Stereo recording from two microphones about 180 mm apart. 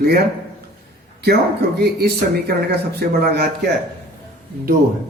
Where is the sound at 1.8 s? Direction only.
60° right (ahead or behind).